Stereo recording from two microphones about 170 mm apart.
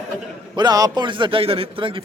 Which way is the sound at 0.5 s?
25° right (ahead or behind).